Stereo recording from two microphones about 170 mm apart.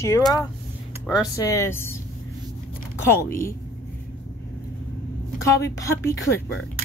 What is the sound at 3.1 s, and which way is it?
Speech, 15° left (ahead or behind).